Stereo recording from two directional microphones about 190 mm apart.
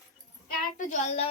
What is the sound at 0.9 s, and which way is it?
Speech, 35° left (ahead or behind).